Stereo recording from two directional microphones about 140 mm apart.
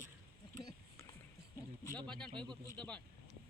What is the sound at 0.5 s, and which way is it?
Speech, 30° left (ahead or behind).